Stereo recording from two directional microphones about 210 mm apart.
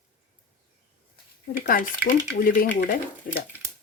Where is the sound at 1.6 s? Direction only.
45° left (ahead or behind).